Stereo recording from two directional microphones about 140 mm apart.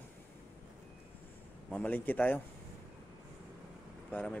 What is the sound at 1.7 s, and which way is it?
Speech, 10° left (ahead or behind).